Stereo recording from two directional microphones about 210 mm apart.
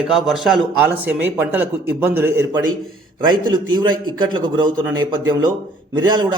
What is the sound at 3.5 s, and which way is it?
A man's voice, 20° right (ahead or behind).